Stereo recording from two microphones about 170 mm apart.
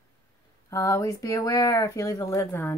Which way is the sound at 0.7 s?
20° left (ahead or behind).